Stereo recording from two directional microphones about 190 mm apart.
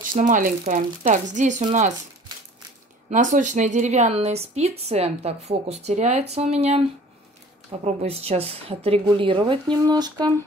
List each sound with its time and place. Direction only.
0.1 s a woman's voice: 45° right (ahead or behind)
3.1 s a woman's voice: 40° right (ahead or behind)
7.8 s speech: 35° right (ahead or behind)